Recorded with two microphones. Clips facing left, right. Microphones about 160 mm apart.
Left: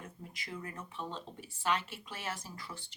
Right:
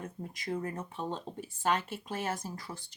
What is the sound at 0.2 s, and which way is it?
Speech, 45° right (ahead or behind).